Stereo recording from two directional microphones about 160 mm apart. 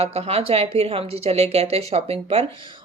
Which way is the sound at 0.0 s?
40° right (ahead or behind).